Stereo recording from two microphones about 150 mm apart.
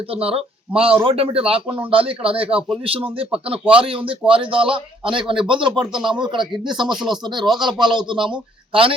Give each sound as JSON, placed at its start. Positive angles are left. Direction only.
{"t": 0.1, "sound": "a man's voice", "side_deg": -40}